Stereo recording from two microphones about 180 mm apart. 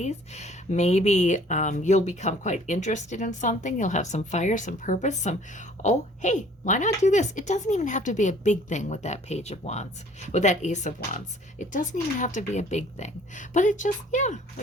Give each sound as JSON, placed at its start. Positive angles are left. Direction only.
{"t": 0.0, "sound": "speech", "side_deg": 40}